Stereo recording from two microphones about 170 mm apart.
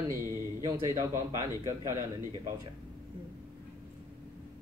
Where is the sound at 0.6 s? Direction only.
15° right (ahead or behind).